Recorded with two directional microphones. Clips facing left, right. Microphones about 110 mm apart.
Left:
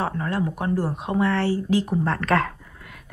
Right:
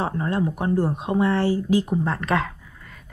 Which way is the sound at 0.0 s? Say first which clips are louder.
Right 1 dB; 25° right (ahead or behind).